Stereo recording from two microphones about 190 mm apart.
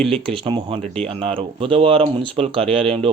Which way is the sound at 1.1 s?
30° right (ahead or behind).